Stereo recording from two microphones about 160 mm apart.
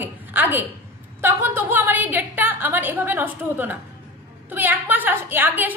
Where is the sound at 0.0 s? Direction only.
10° right (ahead or behind).